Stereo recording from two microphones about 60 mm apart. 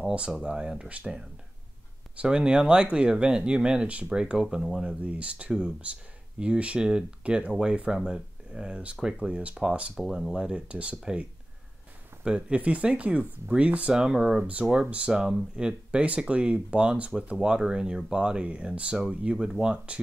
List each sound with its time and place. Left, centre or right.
0.0 s speech: centre
4.6 s speech: centre
4.8 s speech: right
9.9 s speech: centre
12.3 s speech: centre
14.4 s speech: centre